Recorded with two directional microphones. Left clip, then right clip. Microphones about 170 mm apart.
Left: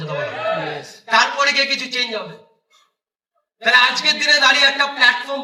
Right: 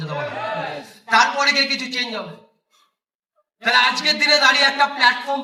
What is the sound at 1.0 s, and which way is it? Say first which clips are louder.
A man's voice: even; 20° left (ahead or behind).